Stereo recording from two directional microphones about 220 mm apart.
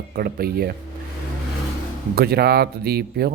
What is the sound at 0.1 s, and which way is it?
Speech, 40° right (ahead or behind).